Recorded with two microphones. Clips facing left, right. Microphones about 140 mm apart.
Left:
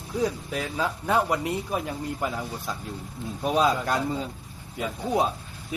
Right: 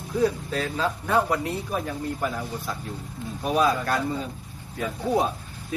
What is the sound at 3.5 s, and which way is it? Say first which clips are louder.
Speech: right 1 dB; 20° left (ahead or behind).